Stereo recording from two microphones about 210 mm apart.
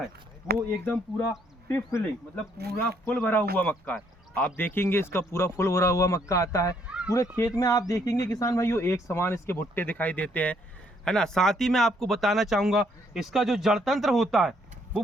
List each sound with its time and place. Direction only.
0.9 s a man's voice: 10° left (ahead or behind)
2.6 s speech: 50° right (ahead or behind)
3.1 s a man's voice: 10° left (ahead or behind)
6.8 s a sound: 5° right (ahead or behind)
7.1 s a man's voice: 15° left (ahead or behind); by 14.5 s centre (ahead or behind)